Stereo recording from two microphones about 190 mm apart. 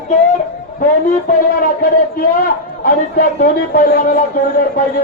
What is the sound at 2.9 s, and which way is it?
A man's voice, 50° left (ahead or behind).